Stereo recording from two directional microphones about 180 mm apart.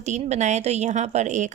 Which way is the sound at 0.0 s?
40° right (ahead or behind).